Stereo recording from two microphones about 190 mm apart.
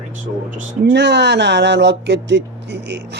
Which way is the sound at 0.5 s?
65° right (ahead or behind).